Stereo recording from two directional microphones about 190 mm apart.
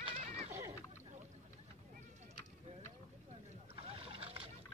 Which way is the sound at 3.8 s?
30° right (ahead or behind).